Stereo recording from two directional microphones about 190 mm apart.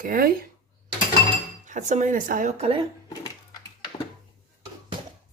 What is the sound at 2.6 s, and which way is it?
Speech, 30° right (ahead or behind).